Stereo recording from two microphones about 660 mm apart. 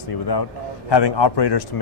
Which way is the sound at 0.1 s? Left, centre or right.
Left.